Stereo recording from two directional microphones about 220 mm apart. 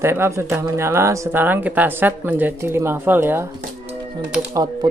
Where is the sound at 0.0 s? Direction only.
10° right (ahead or behind).